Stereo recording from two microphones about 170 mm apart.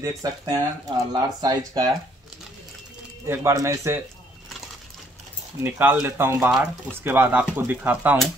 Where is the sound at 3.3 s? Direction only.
15° right (ahead or behind).